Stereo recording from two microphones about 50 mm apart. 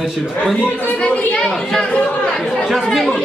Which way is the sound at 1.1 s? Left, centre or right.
Left.